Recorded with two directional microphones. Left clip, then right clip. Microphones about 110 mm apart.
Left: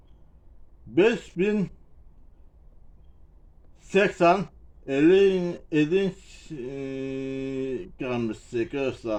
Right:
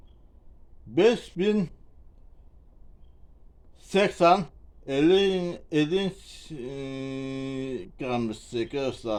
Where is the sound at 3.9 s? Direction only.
20° right (ahead or behind).